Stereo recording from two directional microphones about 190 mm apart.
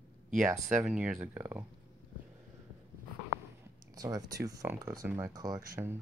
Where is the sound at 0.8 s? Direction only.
5° right (ahead or behind).